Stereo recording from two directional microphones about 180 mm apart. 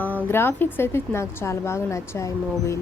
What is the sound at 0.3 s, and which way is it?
A woman's voice, 10° left (ahead or behind).